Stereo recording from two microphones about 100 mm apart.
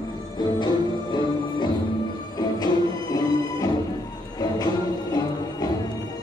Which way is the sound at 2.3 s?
40° left (ahead or behind).